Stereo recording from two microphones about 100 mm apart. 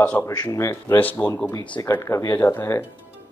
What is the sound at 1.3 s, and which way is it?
Speech, 25° left (ahead or behind).